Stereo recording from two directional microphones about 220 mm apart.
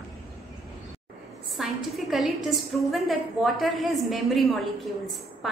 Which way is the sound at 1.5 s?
Centre (ahead or behind).